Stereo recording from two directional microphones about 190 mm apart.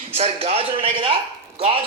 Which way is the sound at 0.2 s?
30° right (ahead or behind).